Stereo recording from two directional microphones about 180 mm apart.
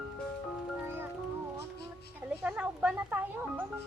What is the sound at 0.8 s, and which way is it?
Music, 10° right (ahead or behind).